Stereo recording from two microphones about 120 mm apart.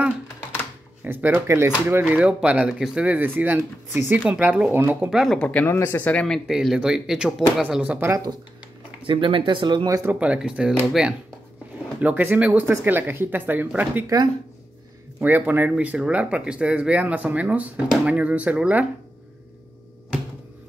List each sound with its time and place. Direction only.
1.0 s speech: 20° right (ahead or behind)
5.1 s speech: centre (ahead or behind)
5.7 s speech: 20° left (ahead or behind)
6.4 s speech: 5° right (ahead or behind)
9.0 s speech: 45° right (ahead or behind)
9.8 s speech: 25° right (ahead or behind)
10.1 s speech: 10° right (ahead or behind)
15.1 s speech: 15° right (ahead or behind)
17.8 s speech: centre (ahead or behind)
18.1 s speech: 10° right (ahead or behind)